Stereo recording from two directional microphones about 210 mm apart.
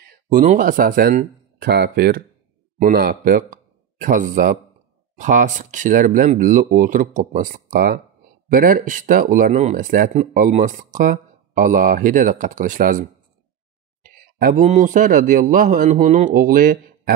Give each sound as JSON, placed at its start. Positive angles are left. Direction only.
{"t": 0.3, "sound": "speech", "side_deg": -40}
{"t": 14.4, "sound": "speech", "side_deg": -40}